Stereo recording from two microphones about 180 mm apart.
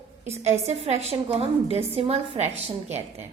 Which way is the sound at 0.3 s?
35° right (ahead or behind).